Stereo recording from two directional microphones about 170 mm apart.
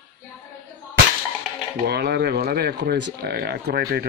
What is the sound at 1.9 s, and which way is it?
Speech, 75° right (ahead or behind).